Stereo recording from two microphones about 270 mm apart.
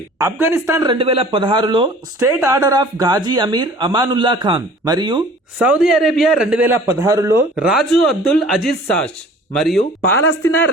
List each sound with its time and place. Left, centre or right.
0.2 s speech: centre
5.5 s a man's voice: centre
10.0 s speech: left